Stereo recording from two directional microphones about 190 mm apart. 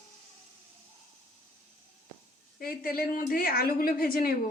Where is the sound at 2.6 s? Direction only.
50° left (ahead or behind).